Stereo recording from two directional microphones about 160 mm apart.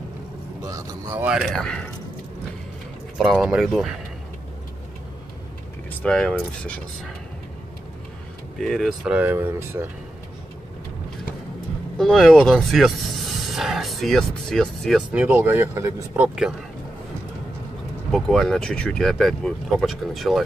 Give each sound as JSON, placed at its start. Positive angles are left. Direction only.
{"t": 0.6, "sound": "speech", "side_deg": -20}
{"t": 1.2, "sound": "speech", "side_deg": 0}
{"t": 3.2, "sound": "speech", "side_deg": -5}
{"t": 5.9, "sound": "speech", "side_deg": 5}
{"t": 8.5, "sound": "speech", "side_deg": 0}
{"t": 12.0, "sound": "speech", "side_deg": 0}
{"t": 15.0, "sound": "speech", "side_deg": -10}
{"t": 18.1, "sound": "speech", "side_deg": 5}